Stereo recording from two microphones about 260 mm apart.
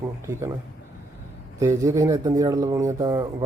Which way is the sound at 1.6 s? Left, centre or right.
Centre.